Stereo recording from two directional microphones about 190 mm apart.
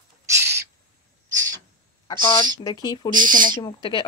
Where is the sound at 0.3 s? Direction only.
15° right (ahead or behind).